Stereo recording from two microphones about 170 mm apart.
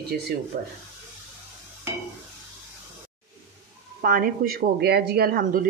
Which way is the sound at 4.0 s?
55° right (ahead or behind).